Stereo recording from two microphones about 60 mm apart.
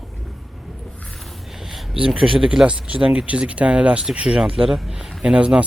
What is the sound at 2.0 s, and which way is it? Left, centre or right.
Speech, centre.